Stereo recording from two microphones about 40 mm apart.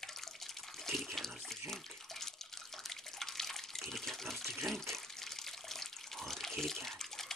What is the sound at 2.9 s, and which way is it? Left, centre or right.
Water, centre.